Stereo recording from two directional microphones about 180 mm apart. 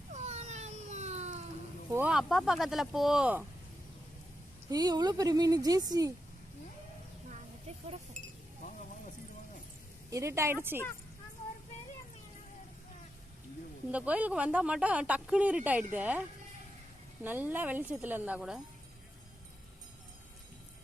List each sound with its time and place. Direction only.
0.1 s cat: 40° right (ahead or behind)
1.9 s speech: 10° right (ahead or behind)
4.7 s a woman's voice: 20° right (ahead or behind)
10.1 s speech: 15° right (ahead or behind)
13.9 s speech: 10° right (ahead or behind)
17.2 s speech: 10° right (ahead or behind)